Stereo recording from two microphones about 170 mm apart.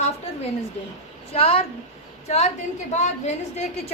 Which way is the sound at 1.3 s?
35° left (ahead or behind).